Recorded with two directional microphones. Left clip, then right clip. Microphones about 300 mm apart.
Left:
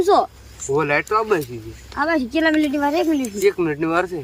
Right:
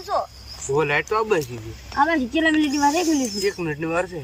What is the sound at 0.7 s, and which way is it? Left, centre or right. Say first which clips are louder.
A child's voice: left 2 dB; centre.